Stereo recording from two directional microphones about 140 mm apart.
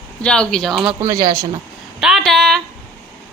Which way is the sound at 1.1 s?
90° right.